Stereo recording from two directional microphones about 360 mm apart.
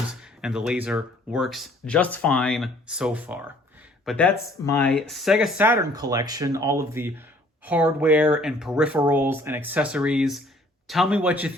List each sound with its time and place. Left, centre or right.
0.1 s speech: centre